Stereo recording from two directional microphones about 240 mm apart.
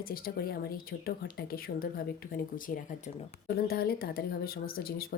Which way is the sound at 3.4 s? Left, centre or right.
Left.